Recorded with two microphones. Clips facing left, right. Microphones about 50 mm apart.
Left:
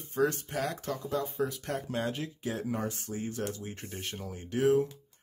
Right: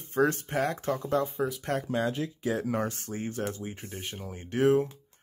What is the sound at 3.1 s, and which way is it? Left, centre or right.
Speech, right.